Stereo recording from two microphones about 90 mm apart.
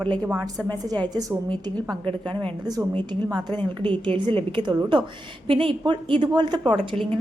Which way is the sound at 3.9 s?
70° right (ahead or behind).